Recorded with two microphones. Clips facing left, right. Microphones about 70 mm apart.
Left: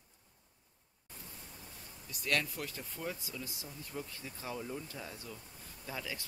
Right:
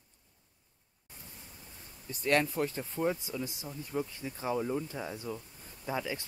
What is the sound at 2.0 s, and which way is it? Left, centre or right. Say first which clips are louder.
Speech: right 7 dB; right.